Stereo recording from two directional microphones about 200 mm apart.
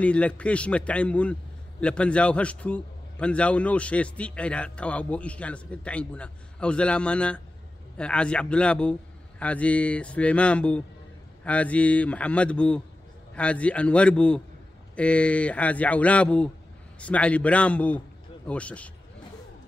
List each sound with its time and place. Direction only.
0.0 s a man's voice: 5° left (ahead or behind)